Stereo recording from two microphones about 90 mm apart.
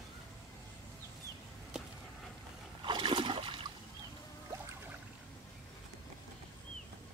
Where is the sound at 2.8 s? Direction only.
60° right (ahead or behind).